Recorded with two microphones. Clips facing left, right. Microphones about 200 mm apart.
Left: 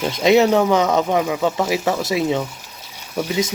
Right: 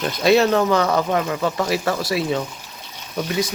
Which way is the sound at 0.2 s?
15° left (ahead or behind).